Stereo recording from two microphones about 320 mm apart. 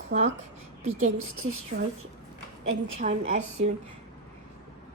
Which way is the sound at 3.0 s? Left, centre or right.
Right.